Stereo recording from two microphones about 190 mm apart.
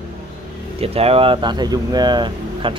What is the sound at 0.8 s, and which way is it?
Speech, 30° right (ahead or behind).